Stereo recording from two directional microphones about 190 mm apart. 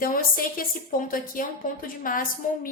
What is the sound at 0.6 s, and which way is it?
A woman's voice, 50° left (ahead or behind).